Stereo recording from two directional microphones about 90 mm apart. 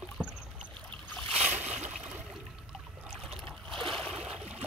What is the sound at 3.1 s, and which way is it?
Boat, centre (ahead or behind).